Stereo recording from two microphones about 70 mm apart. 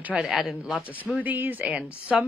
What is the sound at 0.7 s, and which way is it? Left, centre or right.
Speech, right.